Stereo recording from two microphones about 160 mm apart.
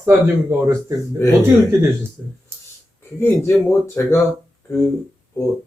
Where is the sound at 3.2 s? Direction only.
15° left (ahead or behind).